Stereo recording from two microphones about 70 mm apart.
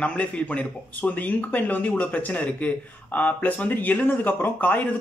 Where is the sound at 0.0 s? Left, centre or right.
Centre.